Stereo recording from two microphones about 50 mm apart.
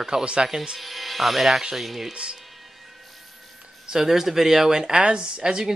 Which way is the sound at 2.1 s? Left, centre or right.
Centre.